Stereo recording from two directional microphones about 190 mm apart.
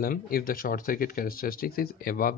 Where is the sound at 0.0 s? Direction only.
50° left (ahead or behind).